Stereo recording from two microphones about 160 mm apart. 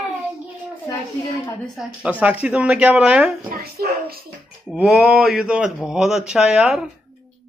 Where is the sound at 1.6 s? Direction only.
Centre (ahead or behind).